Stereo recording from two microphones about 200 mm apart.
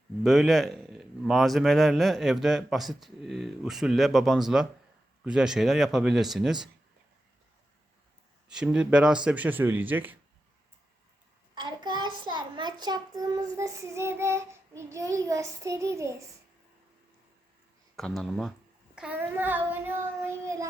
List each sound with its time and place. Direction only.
0.2 s speech: centre (ahead or behind)
8.4 s child singing: 5° right (ahead or behind)
11.5 s child singing: 20° right (ahead or behind)
17.9 s speech: centre (ahead or behind)
18.9 s child singing: 5° right (ahead or behind)